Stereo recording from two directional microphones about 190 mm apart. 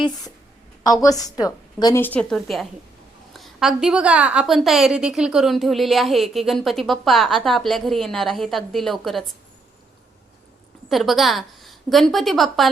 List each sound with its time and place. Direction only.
1.0 s a woman's voice: 20° left (ahead or behind); by 9.3 s centre (ahead or behind)
10.8 s a woman's voice: centre (ahead or behind)